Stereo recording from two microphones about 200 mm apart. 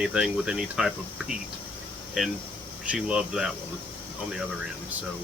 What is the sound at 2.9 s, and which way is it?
Speech, 5° right (ahead or behind).